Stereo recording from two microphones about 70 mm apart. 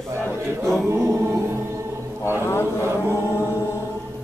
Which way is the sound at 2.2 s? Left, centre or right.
Left.